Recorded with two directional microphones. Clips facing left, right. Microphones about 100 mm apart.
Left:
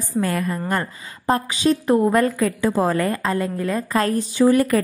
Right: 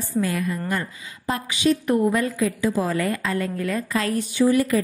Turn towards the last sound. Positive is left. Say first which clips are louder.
# left 3 dB
turn(degrees=55)  # may be behind; listen again after turning